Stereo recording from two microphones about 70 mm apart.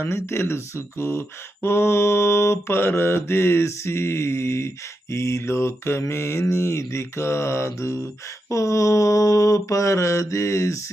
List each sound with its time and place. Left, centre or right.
0.0 s mantra: left